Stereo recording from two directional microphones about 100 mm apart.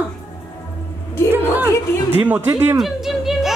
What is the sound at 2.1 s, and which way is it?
Speech, 20° right (ahead or behind).